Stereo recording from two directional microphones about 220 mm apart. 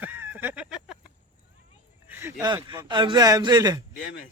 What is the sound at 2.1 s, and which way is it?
A man's voice, 10° right (ahead or behind).